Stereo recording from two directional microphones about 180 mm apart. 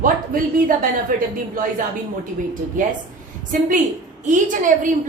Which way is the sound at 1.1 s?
50° right (ahead or behind).